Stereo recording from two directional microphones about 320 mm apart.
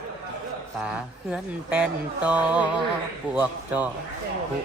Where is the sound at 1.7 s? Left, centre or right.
Centre.